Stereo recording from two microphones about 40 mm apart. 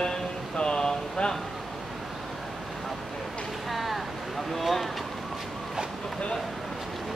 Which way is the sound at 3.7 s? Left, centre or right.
Centre.